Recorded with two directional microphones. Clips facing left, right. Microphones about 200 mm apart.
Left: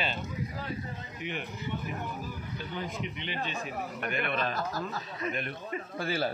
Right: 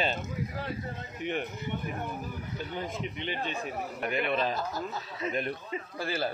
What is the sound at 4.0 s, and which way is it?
A man's voice, 20° right (ahead or behind).